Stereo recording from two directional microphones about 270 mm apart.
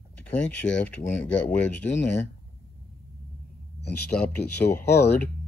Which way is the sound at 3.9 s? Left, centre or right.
Centre.